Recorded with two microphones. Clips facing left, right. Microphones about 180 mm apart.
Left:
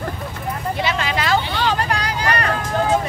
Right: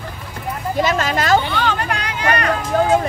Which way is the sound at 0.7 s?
45° right (ahead or behind).